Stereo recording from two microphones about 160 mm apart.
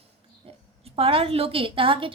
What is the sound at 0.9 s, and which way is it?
A woman's voice, 35° right (ahead or behind).